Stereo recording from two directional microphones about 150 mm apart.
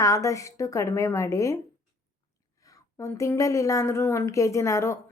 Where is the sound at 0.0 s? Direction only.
20° left (ahead or behind).